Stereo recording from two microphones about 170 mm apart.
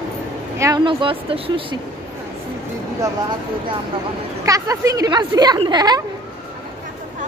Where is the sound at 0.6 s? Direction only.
25° right (ahead or behind).